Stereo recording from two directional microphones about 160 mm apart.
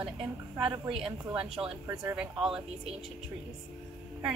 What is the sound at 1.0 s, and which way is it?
Speech, 35° right (ahead or behind).